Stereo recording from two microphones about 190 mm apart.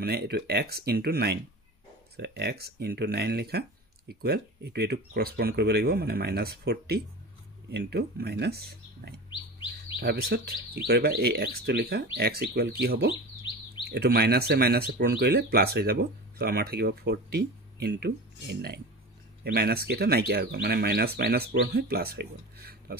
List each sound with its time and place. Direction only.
0.0 s speech: 55° right (ahead or behind)